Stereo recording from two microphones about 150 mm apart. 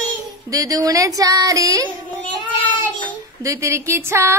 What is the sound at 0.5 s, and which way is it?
Speech, 25° right (ahead or behind).